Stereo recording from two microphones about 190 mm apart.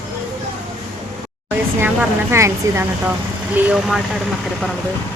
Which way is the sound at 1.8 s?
15° right (ahead or behind).